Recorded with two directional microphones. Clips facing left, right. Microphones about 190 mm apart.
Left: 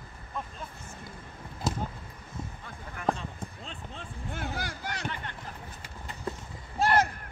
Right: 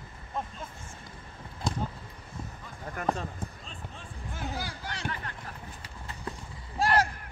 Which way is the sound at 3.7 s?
60° left (ahead or behind).